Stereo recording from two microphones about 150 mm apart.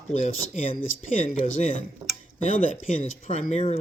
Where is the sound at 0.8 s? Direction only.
55° left (ahead or behind).